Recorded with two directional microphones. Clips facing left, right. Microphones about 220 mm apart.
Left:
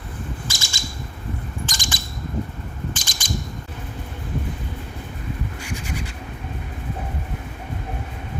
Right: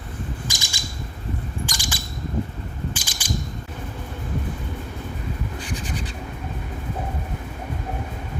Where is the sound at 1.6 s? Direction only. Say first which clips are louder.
Even; 10° right (ahead or behind).